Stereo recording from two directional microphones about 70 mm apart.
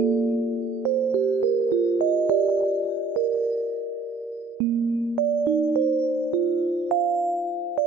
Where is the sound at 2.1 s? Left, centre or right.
Right.